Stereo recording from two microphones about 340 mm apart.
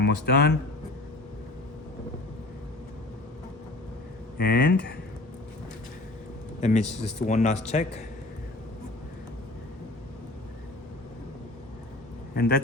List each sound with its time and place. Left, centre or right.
0.0 s speech: left
4.4 s a man's voice: left
6.6 s a man's voice: centre